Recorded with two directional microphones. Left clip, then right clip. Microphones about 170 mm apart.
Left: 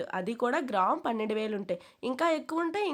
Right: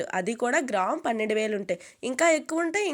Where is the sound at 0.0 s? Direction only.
10° right (ahead or behind).